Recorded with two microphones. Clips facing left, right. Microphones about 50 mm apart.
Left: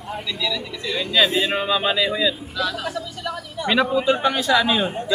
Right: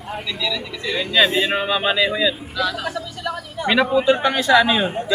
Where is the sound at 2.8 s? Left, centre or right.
Centre.